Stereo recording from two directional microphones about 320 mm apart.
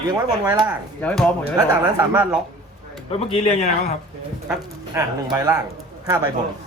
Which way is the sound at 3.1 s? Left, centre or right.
Centre.